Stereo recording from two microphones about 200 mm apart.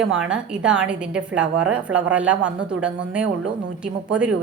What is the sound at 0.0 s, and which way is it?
A woman's voice, 5° right (ahead or behind).